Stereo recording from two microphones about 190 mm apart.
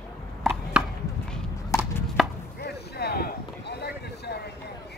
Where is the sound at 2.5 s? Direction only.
60° left (ahead or behind).